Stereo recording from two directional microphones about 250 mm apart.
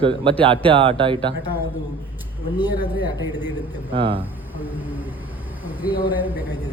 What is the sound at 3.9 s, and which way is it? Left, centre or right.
Speech, right.